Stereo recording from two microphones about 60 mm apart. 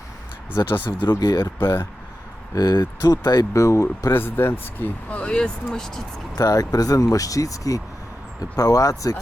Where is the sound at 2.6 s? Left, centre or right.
Left.